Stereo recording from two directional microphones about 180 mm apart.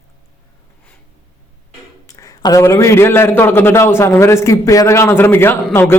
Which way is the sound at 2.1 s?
20° left (ahead or behind).